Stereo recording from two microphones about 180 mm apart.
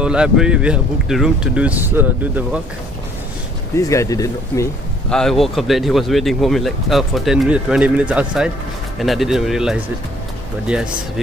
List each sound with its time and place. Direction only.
0.0 s speech: 5° right (ahead or behind)
3.7 s speech: 15° left (ahead or behind)
5.1 s speech: centre (ahead or behind)